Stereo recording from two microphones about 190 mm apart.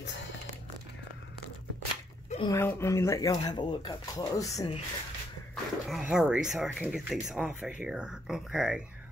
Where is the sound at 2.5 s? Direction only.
15° left (ahead or behind).